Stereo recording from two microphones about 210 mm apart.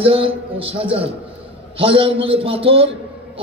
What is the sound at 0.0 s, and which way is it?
A man's voice, 25° right (ahead or behind).